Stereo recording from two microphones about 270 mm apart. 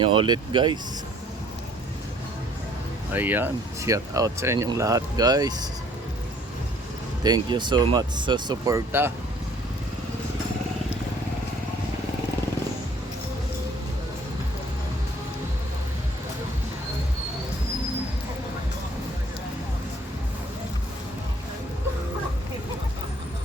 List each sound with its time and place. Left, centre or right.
0.0 s speech: centre
3.1 s speech: centre
7.3 s speech: centre